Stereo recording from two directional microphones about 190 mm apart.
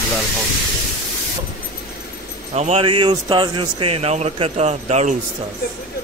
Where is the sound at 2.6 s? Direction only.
30° right (ahead or behind).